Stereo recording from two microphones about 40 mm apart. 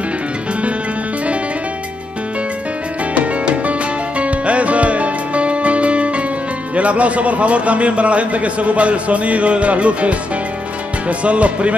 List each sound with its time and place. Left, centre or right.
3.2 s music: right
6.7 s a man's voice: right